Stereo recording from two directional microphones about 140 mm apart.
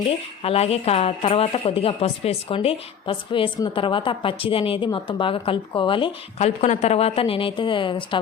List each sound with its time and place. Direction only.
0.4 s a woman's voice: 45° left (ahead or behind)
6.4 s a woman's voice: 55° left (ahead or behind); by 8.2 s 35° left (ahead or behind)